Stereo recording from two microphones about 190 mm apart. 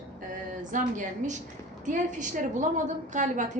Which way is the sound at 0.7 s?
40° right (ahead or behind).